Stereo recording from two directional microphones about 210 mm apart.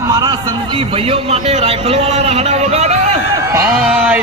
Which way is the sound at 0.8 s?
25° right (ahead or behind).